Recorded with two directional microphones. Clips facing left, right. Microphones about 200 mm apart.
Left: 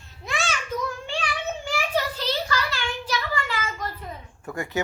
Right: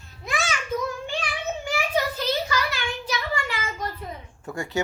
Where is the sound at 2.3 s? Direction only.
20° right (ahead or behind).